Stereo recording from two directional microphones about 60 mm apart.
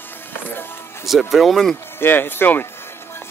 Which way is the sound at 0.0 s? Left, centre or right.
Left.